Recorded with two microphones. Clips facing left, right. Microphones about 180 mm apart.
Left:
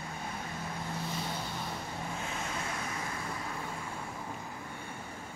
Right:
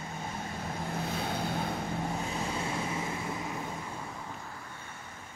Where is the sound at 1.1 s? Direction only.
55° right (ahead or behind).